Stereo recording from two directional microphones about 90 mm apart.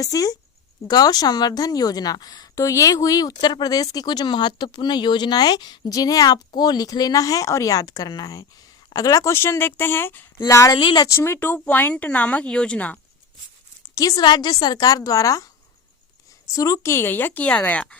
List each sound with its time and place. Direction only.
0.0 s a woman's voice: 40° left (ahead or behind)
9.3 s a woman's voice: 25° left (ahead or behind)
10.5 s speech: 35° left (ahead or behind)
10.8 s speech: 60° left (ahead or behind)
11.1 s speech: 30° left (ahead or behind)
11.3 s speech: 20° left (ahead or behind)
14.2 s a woman's voice: 55° left (ahead or behind)
16.5 s a woman's voice: 40° left (ahead or behind); by 17.9 s 15° left (ahead or behind)